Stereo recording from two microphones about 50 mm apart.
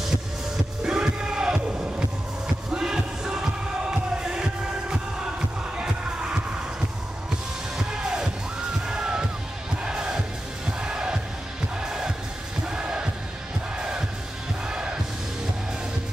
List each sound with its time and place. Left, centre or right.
0.8 s music: centre
7.7 s music: centre